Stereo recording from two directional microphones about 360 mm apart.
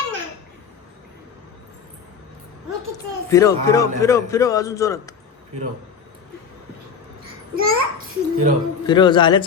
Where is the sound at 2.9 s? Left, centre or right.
Centre.